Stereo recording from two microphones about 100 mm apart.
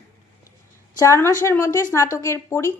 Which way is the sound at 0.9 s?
30° left (ahead or behind).